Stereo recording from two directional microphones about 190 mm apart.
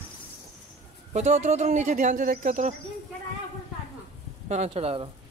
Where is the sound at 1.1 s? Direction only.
35° right (ahead or behind).